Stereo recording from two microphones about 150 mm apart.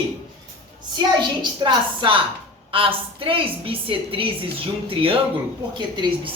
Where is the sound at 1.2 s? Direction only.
30° right (ahead or behind).